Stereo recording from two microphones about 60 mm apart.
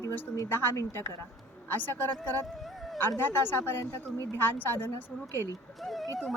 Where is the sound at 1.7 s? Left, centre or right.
Left.